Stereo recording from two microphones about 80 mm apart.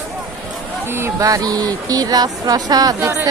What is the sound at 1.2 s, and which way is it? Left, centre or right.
Speech, right.